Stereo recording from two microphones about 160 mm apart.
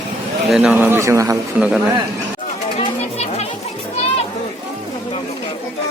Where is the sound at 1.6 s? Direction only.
10° right (ahead or behind).